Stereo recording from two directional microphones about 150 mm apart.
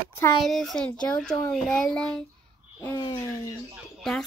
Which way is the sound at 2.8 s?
25° left (ahead or behind).